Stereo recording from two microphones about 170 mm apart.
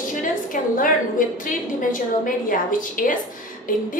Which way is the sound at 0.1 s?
55° left (ahead or behind).